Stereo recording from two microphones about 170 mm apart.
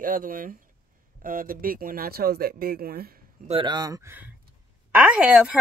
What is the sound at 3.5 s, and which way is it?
Speech, 25° right (ahead or behind).